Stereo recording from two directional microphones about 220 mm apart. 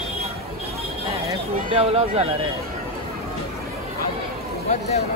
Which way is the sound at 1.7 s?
25° right (ahead or behind).